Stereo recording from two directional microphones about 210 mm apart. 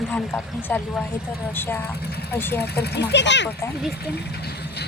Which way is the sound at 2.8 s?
55° left (ahead or behind).